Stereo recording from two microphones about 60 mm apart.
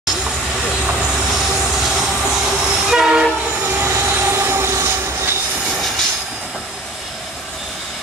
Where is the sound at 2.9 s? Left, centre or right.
Centre.